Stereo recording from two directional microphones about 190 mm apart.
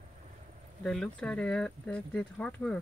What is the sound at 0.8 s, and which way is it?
Speech, 5° left (ahead or behind).